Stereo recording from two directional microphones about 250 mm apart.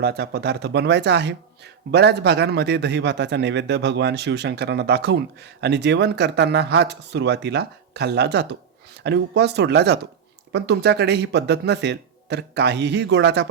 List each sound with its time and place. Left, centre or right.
0.0 s speech: right